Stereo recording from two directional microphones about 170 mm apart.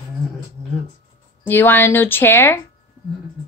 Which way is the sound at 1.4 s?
10° left (ahead or behind).